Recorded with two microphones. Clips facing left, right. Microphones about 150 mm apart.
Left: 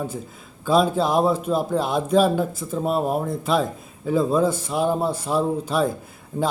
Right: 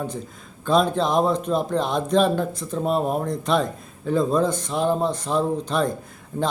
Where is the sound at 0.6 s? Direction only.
5° left (ahead or behind).